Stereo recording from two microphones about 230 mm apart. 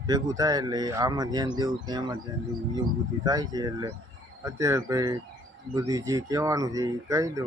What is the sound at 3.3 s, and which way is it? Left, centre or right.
Speech, centre.